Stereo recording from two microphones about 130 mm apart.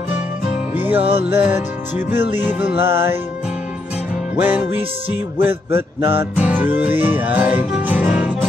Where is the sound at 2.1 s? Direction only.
15° right (ahead or behind).